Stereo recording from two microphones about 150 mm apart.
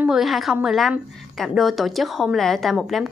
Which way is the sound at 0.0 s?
Centre (ahead or behind).